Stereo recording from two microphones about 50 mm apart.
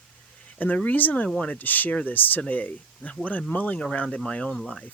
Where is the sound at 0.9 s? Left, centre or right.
Left.